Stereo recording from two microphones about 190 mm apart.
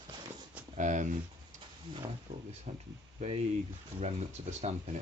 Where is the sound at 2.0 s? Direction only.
25° right (ahead or behind).